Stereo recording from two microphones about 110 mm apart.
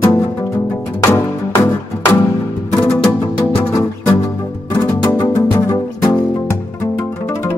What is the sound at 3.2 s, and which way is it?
Music, 30° left (ahead or behind).